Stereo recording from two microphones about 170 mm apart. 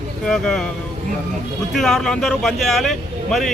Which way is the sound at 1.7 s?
Centre (ahead or behind).